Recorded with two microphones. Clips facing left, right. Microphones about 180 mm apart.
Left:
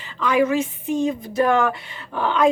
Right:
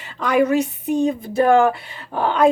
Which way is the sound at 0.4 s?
35° right (ahead or behind).